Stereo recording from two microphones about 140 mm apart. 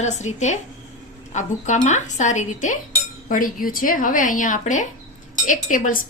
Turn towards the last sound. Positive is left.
turn(degrees=70)  # may be behind; listen again after turning